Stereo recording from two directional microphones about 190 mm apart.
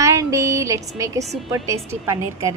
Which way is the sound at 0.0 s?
15° right (ahead or behind).